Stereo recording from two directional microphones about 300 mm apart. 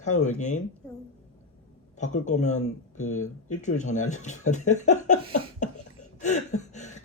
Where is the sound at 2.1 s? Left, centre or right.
Left.